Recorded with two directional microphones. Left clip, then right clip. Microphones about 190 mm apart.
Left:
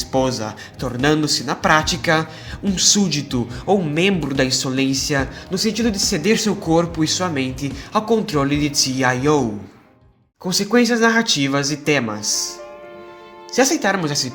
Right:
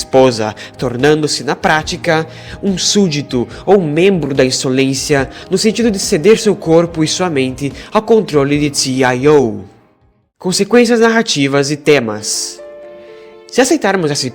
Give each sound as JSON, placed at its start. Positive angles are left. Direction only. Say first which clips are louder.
{"t": 0.1, "sound": "a man's voice", "louder": "right 11 dB", "side_deg": -45}